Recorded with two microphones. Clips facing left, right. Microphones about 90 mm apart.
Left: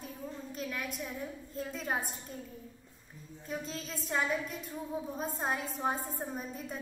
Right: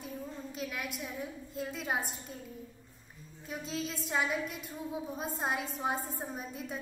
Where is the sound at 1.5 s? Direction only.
10° right (ahead or behind).